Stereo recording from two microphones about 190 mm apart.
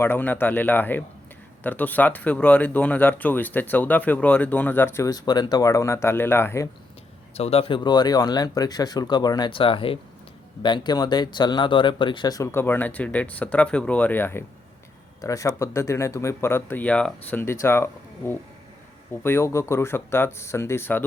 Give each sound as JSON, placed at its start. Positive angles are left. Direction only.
{"t": 0.0, "sound": "speech", "side_deg": 10}
{"t": 7.3, "sound": "speech", "side_deg": 30}